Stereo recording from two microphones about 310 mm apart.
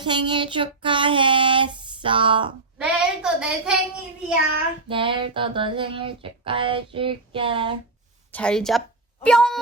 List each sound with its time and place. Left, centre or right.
0.0 s child singing: centre
2.7 s a woman's voice: centre
4.9 s a sound: centre
8.3 s a woman's voice: centre